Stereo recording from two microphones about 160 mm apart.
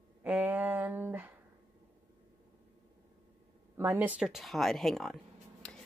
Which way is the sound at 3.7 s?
15° right (ahead or behind).